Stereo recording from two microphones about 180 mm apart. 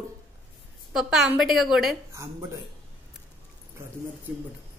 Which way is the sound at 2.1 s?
15° right (ahead or behind).